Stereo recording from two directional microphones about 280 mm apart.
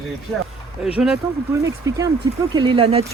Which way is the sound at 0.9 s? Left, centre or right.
Centre.